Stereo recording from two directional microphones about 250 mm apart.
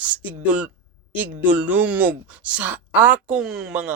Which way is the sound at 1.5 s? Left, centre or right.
Centre.